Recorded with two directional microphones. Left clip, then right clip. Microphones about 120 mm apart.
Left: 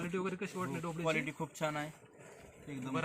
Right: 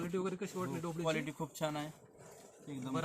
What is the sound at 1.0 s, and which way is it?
Speech, 5° left (ahead or behind).